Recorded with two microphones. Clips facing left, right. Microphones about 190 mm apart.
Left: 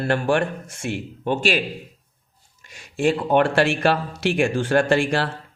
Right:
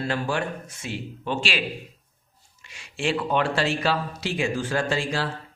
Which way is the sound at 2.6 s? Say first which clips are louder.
Left 7 dB; 45° left (ahead or behind).